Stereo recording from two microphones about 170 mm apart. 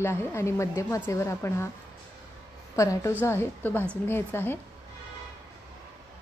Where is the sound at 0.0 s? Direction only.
15° left (ahead or behind).